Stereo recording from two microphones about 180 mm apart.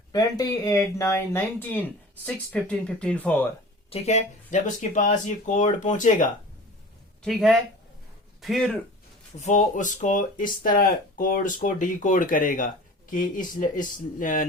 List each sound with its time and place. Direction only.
0.1 s speech: 20° left (ahead or behind)
3.8 s speech: 35° left (ahead or behind)
7.2 s speech: centre (ahead or behind)
9.4 s speech: 40° left (ahead or behind)